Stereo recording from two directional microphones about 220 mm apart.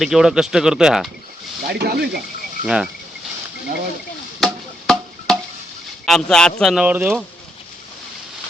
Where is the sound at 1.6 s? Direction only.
45° right (ahead or behind).